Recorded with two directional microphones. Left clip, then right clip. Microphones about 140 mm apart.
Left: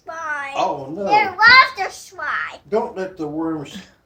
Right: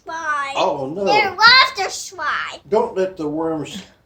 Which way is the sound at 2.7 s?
70° right (ahead or behind).